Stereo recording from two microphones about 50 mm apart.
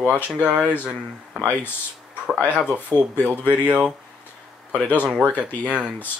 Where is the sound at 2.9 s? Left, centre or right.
Left.